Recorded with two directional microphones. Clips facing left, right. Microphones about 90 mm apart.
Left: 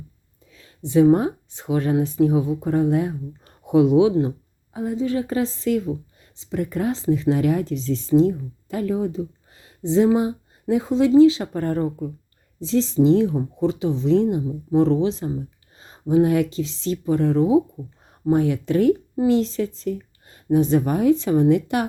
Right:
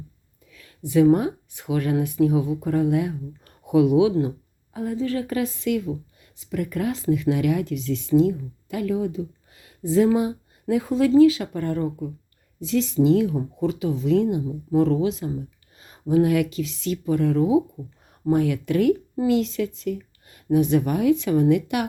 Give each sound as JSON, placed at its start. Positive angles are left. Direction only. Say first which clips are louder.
{"t": 0.5, "sound": "speech", "louder": "left 2 dB", "side_deg": 30}
{"t": 11.5, "sound": "speech", "louder": "left 2 dB", "side_deg": 40}